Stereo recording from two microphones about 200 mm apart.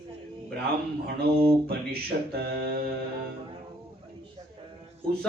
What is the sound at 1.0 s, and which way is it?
Mantra, 50° right (ahead or behind).